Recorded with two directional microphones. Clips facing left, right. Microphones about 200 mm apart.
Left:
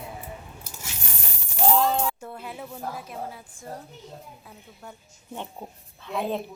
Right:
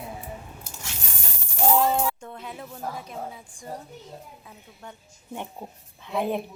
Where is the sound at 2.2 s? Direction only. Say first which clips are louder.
Left 1 dB; 5° left (ahead or behind).